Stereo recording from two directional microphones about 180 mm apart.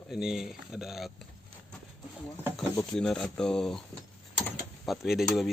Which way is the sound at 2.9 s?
5° left (ahead or behind).